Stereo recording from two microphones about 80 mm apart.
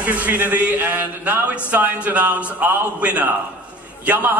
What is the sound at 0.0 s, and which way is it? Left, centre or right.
A man's voice, centre.